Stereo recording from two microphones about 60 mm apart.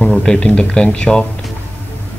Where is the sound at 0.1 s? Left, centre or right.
Centre.